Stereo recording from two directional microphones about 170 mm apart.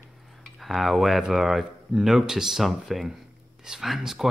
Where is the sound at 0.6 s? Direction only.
Centre (ahead or behind).